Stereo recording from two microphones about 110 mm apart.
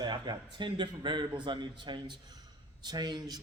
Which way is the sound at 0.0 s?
40° right (ahead or behind).